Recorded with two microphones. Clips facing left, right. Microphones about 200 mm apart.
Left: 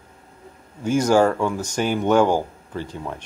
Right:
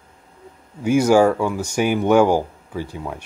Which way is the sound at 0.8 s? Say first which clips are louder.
Right 3 dB; 10° right (ahead or behind).